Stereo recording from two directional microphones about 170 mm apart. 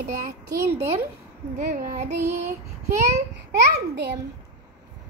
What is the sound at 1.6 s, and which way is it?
Child singing, 50° right (ahead or behind).